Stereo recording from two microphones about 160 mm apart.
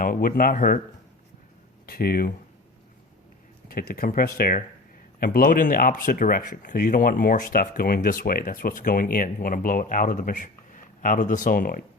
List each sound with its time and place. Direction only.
0.0 s speech: 60° left (ahead or behind)
1.9 s speech: 70° left (ahead or behind)
3.7 s speech: 65° left (ahead or behind)